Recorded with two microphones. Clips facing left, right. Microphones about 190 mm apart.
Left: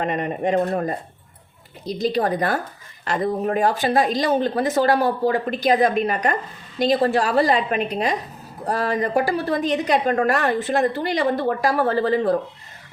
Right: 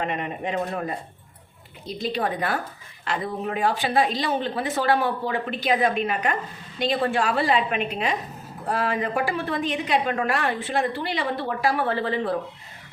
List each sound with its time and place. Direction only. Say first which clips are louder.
0.0 s a woman's voice: left 5 dB; 45° left (ahead or behind)